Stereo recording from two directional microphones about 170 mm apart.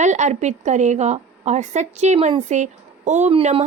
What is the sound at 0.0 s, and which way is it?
A woman's voice, 45° right (ahead or behind).